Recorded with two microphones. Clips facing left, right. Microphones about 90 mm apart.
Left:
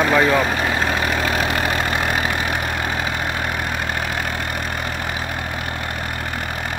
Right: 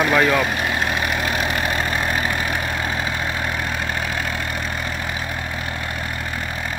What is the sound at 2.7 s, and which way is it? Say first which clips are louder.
Vehicle: left 1 dB; 40° left (ahead or behind).